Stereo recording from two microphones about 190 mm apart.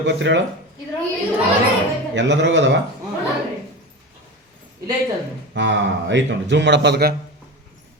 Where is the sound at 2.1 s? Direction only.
70° right (ahead or behind).